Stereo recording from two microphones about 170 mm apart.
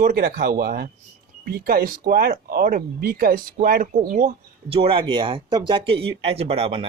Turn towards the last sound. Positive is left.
turn(degrees=-35)  # may be behind; listen again after turning